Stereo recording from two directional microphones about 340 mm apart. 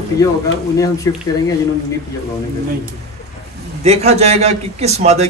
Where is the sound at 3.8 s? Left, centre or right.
Centre.